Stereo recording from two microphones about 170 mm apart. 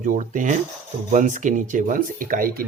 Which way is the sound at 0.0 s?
50° right (ahead or behind).